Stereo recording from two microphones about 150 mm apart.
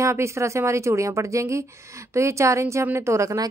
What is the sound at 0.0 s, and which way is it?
A woman's voice, 20° right (ahead or behind).